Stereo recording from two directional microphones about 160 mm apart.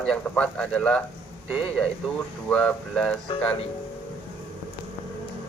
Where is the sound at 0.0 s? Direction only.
5° left (ahead or behind).